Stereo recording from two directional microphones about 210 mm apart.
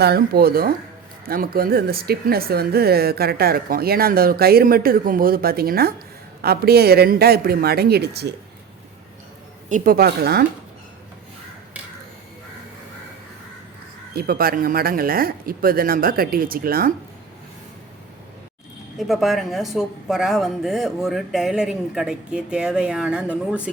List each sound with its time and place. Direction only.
0.0 s speech: 50° right (ahead or behind)
9.6 s speech: 40° right (ahead or behind)
14.2 s speech: 45° right (ahead or behind)
18.9 s speech: centre (ahead or behind)